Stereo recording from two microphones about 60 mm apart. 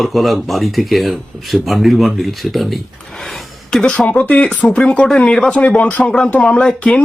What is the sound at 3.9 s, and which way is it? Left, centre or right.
Speech, left.